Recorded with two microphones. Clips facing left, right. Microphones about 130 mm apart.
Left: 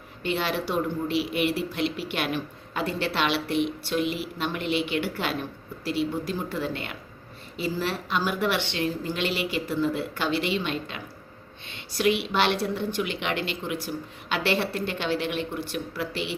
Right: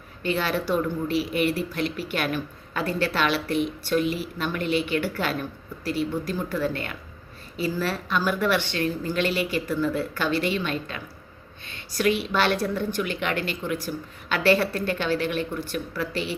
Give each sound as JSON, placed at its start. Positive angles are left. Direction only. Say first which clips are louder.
{"t": 0.2, "sound": "a woman's voice", "louder": "right 2 dB", "side_deg": 20}